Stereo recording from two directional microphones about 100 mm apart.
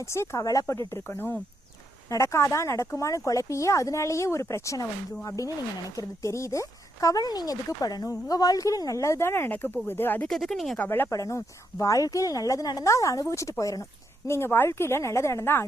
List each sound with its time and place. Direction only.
0.0 s a woman's voice: 30° left (ahead or behind)
10.2 s speech: 5° left (ahead or behind)
10.8 s a woman's voice: 20° left (ahead or behind)
11.1 s speech: 30° left (ahead or behind)
14.3 s a woman's voice: 25° left (ahead or behind)